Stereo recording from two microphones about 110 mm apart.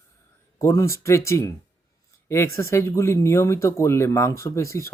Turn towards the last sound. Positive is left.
turn(degrees=25)  # may be behind; listen again after turning